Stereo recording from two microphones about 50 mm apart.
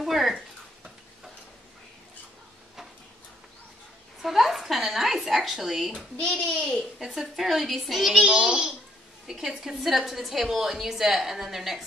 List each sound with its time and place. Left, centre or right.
0.0 s stir: centre
4.2 s a sound: centre
6.1 s a child's voice: left
7.0 s a woman's voice: centre
8.2 s a child's voice: centre